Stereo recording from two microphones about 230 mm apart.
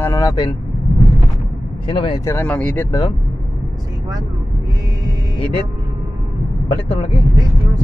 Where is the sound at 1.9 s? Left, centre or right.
Left.